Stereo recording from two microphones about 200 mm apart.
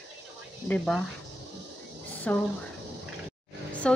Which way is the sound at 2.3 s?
5° left (ahead or behind).